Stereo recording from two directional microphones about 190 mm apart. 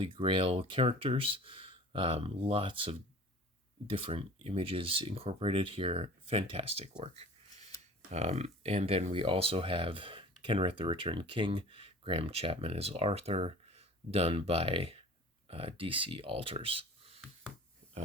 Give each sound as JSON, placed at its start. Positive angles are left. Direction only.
{"t": 0.0, "sound": "speech", "side_deg": -25}
{"t": 8.1, "sound": "speech", "side_deg": -35}